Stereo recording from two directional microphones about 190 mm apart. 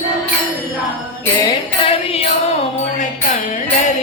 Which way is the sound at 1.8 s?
30° left (ahead or behind).